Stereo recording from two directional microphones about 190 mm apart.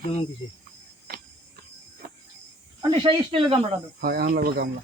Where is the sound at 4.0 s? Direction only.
55° right (ahead or behind).